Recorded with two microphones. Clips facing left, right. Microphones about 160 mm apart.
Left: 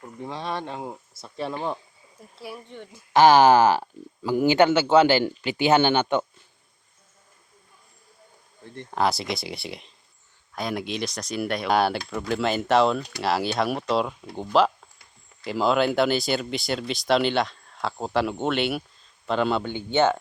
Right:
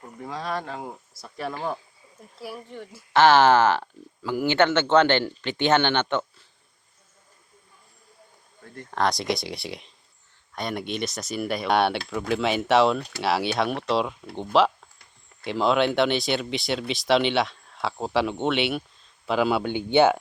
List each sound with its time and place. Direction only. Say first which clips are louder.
0.3 s speech: right 1 dB; 25° left (ahead or behind)
2.4 s speech: right 2 dB; centre (ahead or behind)
3.1 s speech: left 2 dB; 15° left (ahead or behind)
8.9 s speech: even; 5° left (ahead or behind); by 20.1 s 15° right (ahead or behind)